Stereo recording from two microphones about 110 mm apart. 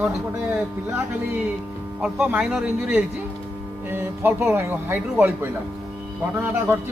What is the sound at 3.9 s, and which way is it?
A man's voice, 20° right (ahead or behind).